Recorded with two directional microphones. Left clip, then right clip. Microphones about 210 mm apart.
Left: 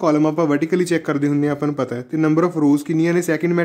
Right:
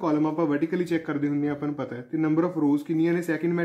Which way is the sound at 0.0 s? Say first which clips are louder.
Left 8 dB; 45° left (ahead or behind).